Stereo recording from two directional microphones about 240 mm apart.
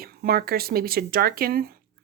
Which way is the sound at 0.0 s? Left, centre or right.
Right.